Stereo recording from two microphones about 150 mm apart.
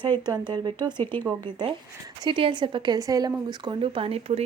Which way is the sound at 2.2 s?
35° right (ahead or behind).